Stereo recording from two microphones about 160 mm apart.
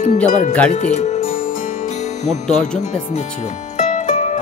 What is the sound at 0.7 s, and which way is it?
Speech, 45° left (ahead or behind).